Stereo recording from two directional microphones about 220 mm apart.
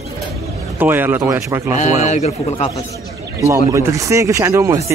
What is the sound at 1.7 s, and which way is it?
A man's voice, 30° left (ahead or behind).